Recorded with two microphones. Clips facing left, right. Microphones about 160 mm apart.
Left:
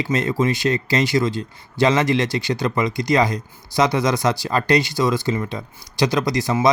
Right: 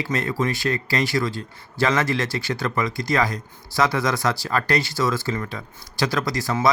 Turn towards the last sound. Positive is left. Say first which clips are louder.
# left 4 dB
turn(degrees=20)  # may be behind; listen again after turning